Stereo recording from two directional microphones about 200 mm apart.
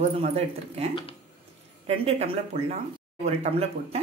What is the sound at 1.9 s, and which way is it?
Speech, 30° right (ahead or behind).